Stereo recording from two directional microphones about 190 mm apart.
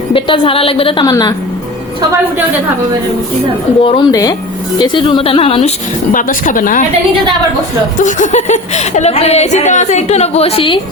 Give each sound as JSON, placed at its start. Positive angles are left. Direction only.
{"t": 0.1, "sound": "a woman's voice", "side_deg": 30}
{"t": 3.8, "sound": "a woman's voice", "side_deg": 25}
{"t": 6.1, "sound": "a woman's voice", "side_deg": 45}
{"t": 7.9, "sound": "speech", "side_deg": 40}